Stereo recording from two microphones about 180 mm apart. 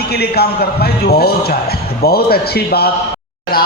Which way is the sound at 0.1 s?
60° left (ahead or behind).